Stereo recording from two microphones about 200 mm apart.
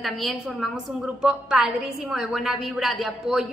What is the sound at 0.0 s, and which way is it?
A woman's voice, centre (ahead or behind).